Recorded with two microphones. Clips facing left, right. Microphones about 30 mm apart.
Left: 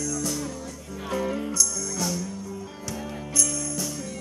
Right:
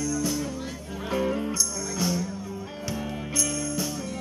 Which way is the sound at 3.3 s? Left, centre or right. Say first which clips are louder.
Left 1 dB; centre.